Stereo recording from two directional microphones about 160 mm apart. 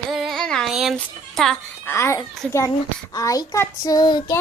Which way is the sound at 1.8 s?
15° left (ahead or behind).